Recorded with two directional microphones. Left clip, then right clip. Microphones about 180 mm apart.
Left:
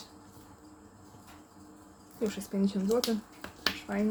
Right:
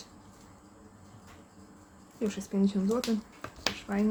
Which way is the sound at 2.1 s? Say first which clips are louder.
Right 1 dB; 20° right (ahead or behind).